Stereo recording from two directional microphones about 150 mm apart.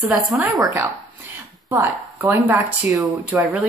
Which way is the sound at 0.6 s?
20° right (ahead or behind).